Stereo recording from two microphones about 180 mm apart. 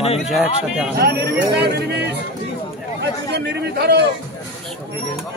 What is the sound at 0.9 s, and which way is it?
A man's voice, 65° right (ahead or behind).